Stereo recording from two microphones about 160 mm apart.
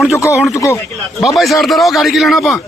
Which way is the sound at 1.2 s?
Centre (ahead or behind).